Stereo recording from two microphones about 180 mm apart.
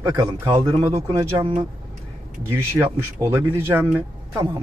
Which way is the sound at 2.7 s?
15° right (ahead or behind).